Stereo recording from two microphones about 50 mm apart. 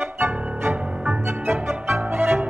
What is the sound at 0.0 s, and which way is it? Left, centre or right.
Music, right.